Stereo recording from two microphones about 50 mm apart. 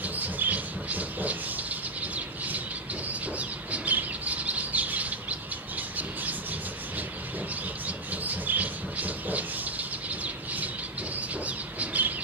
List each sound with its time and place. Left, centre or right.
0.0 s bird: right
5.8 s squawk: right
7.8 s a sound: right
11.1 s bird: right